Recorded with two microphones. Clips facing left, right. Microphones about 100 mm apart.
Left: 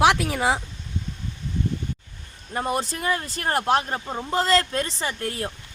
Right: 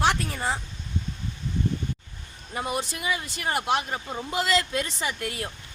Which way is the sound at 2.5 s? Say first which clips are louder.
Left 4 dB; 40° left (ahead or behind).